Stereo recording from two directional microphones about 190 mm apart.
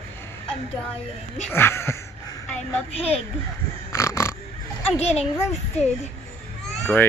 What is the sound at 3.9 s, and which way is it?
Pig, 15° left (ahead or behind).